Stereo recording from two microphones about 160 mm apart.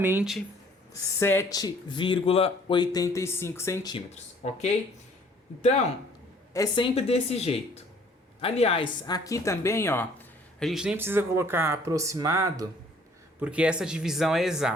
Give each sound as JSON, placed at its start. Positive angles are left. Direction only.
{"t": 0.0, "sound": "speech", "side_deg": -15}
{"t": 0.9, "sound": "speech", "side_deg": 15}
{"t": 3.9, "sound": "speech", "side_deg": 45}
{"t": 6.5, "sound": "a woman's voice", "side_deg": 25}
{"t": 10.7, "sound": "speech", "side_deg": -5}
{"t": 13.4, "sound": "speech", "side_deg": -5}